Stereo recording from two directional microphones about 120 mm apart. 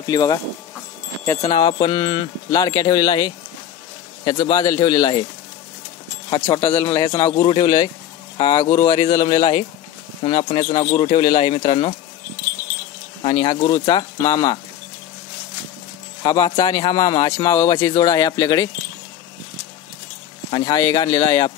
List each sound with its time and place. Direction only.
0.0 s speech: 30° left (ahead or behind)
1.5 s speech: 35° left (ahead or behind)
6.5 s speech: 25° left (ahead or behind); by 11.9 s 45° left (ahead or behind)
13.3 s speech: 35° left (ahead or behind)
16.2 s speech: 40° left (ahead or behind)
20.5 s speech: 30° left (ahead or behind)